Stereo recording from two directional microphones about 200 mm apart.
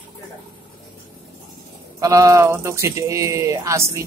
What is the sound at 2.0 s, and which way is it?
Speech, 15° right (ahead or behind).